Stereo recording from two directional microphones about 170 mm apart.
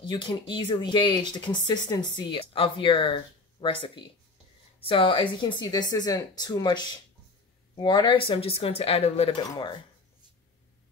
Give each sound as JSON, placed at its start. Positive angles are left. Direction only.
{"t": 0.0, "sound": "speech", "side_deg": 30}